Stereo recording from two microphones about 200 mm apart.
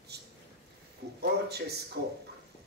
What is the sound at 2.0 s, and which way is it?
Speech, 60° right (ahead or behind).